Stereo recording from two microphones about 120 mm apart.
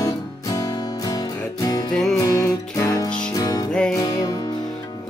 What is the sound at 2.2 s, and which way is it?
Music, 30° left (ahead or behind).